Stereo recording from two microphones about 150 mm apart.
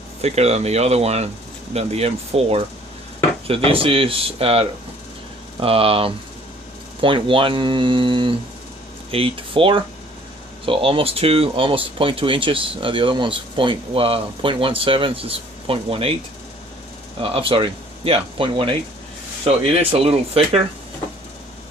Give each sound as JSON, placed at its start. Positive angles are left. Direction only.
{"t": 0.2, "sound": "speech", "side_deg": -45}
{"t": 17.2, "sound": "speech", "side_deg": -35}